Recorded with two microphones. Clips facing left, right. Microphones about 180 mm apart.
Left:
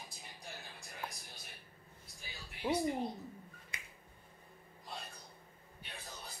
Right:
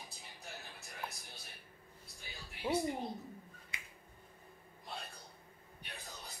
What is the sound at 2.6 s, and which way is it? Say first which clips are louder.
Speech: even; 10° left (ahead or behind).